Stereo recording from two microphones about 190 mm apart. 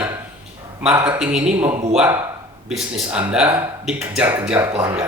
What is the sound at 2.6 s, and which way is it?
Speech, 5° right (ahead or behind).